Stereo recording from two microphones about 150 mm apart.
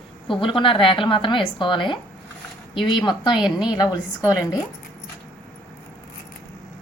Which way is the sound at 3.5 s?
5° right (ahead or behind).